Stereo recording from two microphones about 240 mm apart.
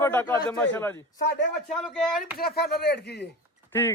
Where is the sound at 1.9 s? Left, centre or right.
Centre.